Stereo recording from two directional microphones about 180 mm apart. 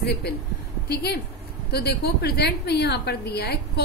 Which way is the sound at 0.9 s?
65° left (ahead or behind).